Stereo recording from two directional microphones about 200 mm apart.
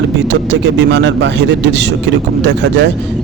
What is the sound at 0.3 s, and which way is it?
A man's voice, 65° right (ahead or behind).